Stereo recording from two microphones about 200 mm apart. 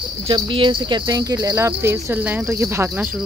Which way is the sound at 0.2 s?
25° right (ahead or behind).